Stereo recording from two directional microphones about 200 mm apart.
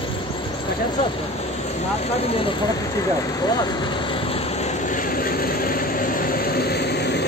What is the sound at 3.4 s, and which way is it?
Vehicle, 25° left (ahead or behind).